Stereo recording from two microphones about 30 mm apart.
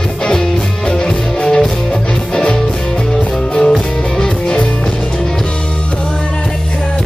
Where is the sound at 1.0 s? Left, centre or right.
Left.